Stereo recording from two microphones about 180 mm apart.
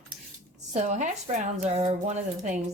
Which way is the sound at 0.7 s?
40° right (ahead or behind).